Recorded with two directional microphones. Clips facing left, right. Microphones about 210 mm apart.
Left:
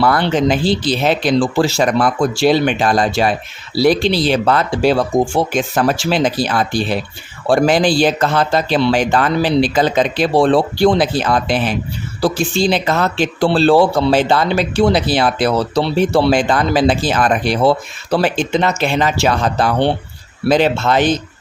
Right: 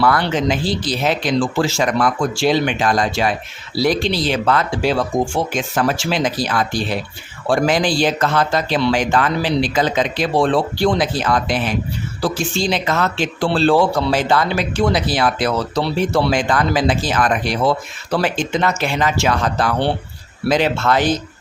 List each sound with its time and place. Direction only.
0.0 s a man's voice: 30° left (ahead or behind)